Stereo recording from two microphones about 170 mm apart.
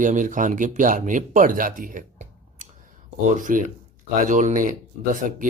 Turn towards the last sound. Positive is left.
turn(degrees=-50)  # may be behind; listen again after turning